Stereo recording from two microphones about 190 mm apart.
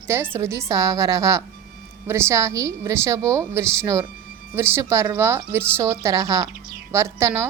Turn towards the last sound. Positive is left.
turn(degrees=-15)  # may be behind; listen again after turning